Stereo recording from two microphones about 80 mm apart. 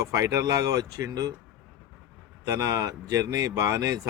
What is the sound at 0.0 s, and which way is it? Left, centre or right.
Speech, right.